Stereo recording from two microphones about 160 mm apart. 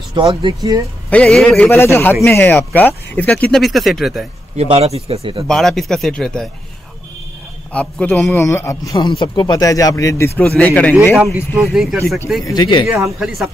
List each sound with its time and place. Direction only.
0.1 s speech: 30° right (ahead or behind)
1.1 s speech: 5° left (ahead or behind)
4.6 s speech: 40° right (ahead or behind)
5.5 s a man's voice: centre (ahead or behind)
7.7 s a man's voice: 10° left (ahead or behind)
11.5 s a man's voice: 5° right (ahead or behind)
12.4 s a man's voice: 30° left (ahead or behind)